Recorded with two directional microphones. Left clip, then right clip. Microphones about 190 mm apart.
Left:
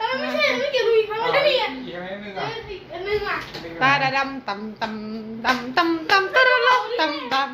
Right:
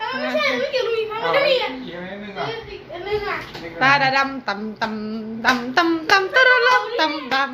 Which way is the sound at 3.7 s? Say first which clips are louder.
Right 3 dB; 15° right (ahead or behind).